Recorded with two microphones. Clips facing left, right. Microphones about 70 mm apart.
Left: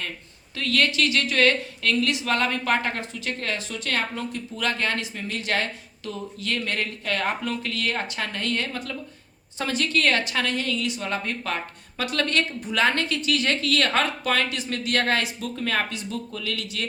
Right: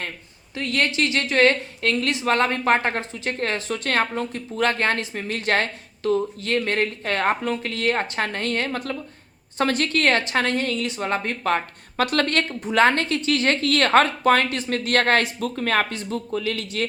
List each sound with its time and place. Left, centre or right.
0.5 s a woman's voice: right